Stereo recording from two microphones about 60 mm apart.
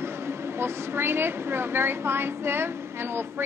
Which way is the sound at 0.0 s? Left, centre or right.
Right.